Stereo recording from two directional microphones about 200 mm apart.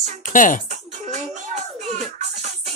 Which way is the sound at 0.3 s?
40° left (ahead or behind).